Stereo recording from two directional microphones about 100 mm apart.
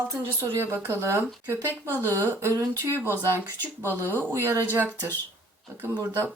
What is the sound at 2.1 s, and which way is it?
Speech, 25° right (ahead or behind).